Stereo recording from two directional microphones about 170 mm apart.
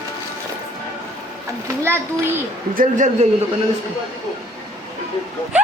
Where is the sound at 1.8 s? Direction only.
15° right (ahead or behind).